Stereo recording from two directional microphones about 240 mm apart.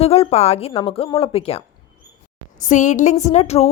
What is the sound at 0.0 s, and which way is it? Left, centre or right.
Speech, left.